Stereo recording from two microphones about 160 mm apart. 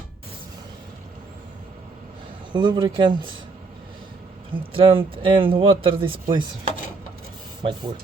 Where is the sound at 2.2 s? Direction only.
30° right (ahead or behind).